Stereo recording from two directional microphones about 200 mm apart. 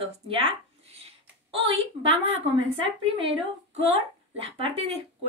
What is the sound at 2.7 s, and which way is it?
Speech, 25° right (ahead or behind).